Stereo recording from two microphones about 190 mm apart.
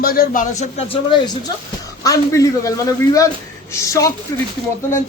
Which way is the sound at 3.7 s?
15° left (ahead or behind).